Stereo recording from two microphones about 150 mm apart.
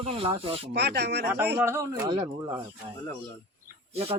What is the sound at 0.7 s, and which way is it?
Speech, 90° right.